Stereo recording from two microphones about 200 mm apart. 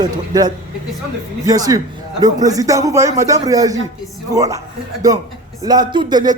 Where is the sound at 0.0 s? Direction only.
20° right (ahead or behind).